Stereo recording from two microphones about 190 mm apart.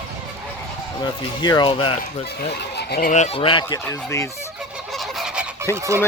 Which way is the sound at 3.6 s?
15° left (ahead or behind).